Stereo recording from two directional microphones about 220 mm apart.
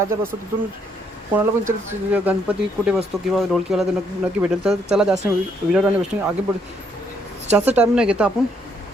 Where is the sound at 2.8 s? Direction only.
Centre (ahead or behind).